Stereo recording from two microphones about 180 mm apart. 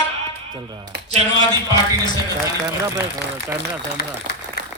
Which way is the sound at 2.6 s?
15° right (ahead or behind).